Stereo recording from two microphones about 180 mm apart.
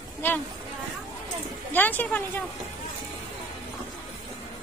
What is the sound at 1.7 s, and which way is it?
Speech, 10° left (ahead or behind).